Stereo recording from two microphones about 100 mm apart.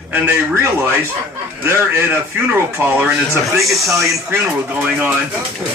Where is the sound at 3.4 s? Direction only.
Centre (ahead or behind).